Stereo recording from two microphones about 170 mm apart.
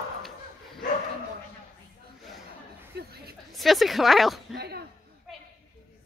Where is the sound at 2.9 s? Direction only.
70° right (ahead or behind).